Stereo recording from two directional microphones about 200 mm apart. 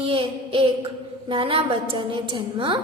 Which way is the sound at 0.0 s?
25° right (ahead or behind).